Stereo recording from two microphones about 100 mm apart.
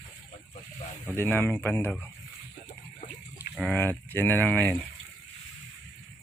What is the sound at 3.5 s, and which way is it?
Speech, centre (ahead or behind).